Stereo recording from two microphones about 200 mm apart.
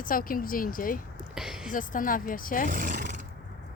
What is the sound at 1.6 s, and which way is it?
Speech, 40° left (ahead or behind).